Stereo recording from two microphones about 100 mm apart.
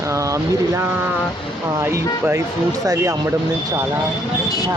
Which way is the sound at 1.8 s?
30° right (ahead or behind).